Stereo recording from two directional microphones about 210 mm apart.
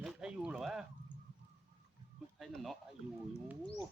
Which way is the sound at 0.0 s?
Centre (ahead or behind).